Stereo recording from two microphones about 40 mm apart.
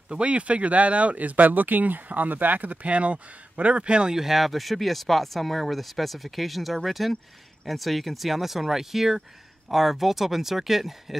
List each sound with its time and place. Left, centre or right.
0.1 s speech: right
4.1 s speech: centre